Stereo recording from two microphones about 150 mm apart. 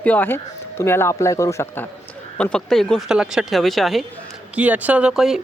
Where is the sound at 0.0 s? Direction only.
10° left (ahead or behind).